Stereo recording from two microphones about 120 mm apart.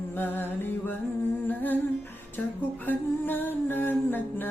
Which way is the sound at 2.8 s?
15° left (ahead or behind).